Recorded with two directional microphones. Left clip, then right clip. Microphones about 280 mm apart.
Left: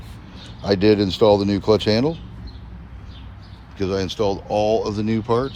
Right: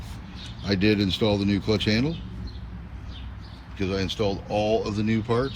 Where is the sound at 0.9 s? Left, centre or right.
Centre.